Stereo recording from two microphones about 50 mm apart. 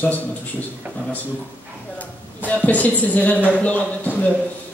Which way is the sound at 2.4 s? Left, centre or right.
Left.